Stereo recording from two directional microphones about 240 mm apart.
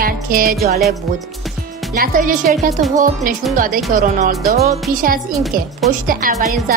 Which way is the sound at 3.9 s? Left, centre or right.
Right.